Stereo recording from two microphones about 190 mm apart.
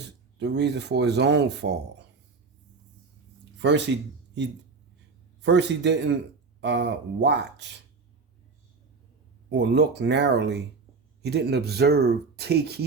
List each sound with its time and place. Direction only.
0.3 s speech: 65° right (ahead or behind)
3.6 s speech: 65° right (ahead or behind)
5.4 s speech: 65° right (ahead or behind)
9.5 s speech: 65° right (ahead or behind)